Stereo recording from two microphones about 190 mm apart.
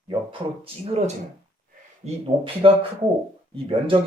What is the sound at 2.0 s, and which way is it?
Speech, 30° right (ahead or behind).